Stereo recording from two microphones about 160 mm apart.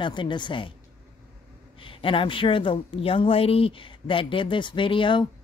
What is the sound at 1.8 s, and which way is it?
A woman's voice, 35° left (ahead or behind).